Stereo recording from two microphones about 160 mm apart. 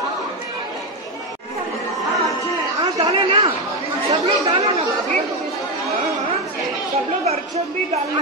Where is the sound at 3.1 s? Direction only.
30° right (ahead or behind).